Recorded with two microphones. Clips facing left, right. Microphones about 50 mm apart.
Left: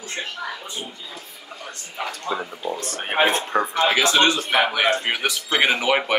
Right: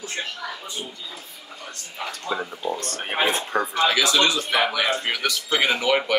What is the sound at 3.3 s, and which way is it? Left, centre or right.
A man's voice, left.